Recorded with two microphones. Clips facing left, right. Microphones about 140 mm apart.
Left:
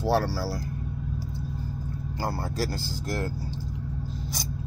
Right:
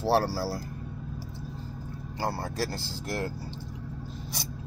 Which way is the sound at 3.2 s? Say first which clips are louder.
Left 1 dB; 20° right (ahead or behind).